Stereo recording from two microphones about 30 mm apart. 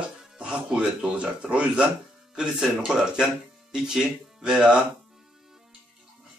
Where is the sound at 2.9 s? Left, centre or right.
Right.